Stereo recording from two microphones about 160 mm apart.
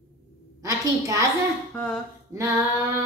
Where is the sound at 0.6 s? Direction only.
20° right (ahead or behind).